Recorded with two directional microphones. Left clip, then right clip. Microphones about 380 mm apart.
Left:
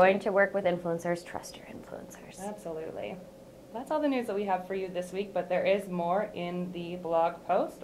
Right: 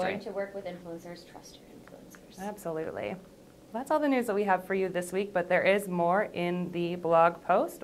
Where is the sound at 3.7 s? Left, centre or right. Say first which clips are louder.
Right 2 dB; right.